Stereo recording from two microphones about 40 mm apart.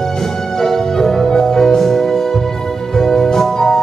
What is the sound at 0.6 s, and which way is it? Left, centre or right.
Music, centre.